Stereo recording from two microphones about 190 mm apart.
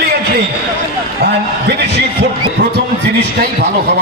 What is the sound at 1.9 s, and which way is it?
Speech, 60° right (ahead or behind).